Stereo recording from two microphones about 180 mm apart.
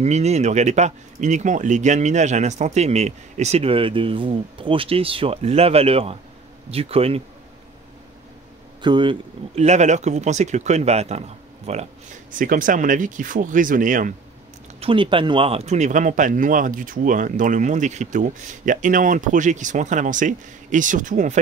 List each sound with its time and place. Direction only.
0.0 s speech: 40° right (ahead or behind)
8.8 s speech: 25° right (ahead or behind)
9.7 s speech: 40° right (ahead or behind)
14.8 s speech: 30° right (ahead or behind); by 21.4 s 45° right (ahead or behind)